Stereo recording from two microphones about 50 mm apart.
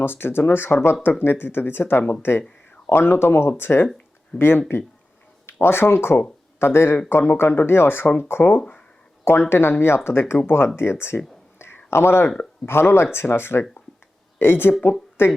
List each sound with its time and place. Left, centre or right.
0.0 s speech: left
9.2 s speech: left
11.9 s speech: left